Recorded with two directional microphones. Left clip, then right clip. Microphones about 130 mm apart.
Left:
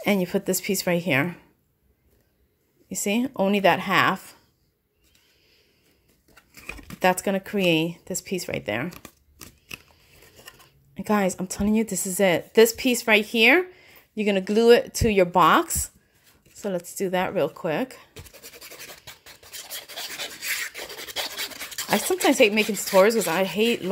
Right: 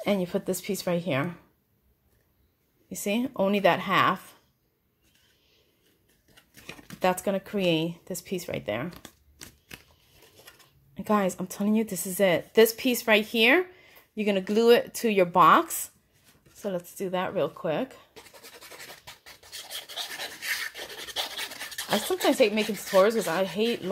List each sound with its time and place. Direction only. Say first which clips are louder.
0.0 s a woman's voice: left 3 dB; 50° left (ahead or behind)
2.9 s speech: left 3 dB; 35° left (ahead or behind)
6.5 s scissors: left 5 dB; 25° left (ahead or behind)
7.0 s speech: left 4 dB; 40° left (ahead or behind)
11.0 s speech: left 2 dB; 30° left (ahead or behind)
16.5 s scratch: left 4 dB; 40° left (ahead or behind)
19.7 s filing: even; 35° left (ahead or behind)